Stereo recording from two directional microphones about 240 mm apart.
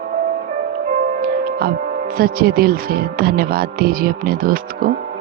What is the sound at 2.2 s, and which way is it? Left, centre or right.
Speech, right.